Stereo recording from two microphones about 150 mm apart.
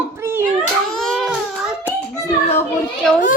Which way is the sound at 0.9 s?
5° left (ahead or behind).